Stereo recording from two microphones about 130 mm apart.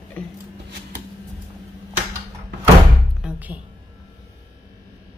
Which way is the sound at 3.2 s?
10° right (ahead or behind).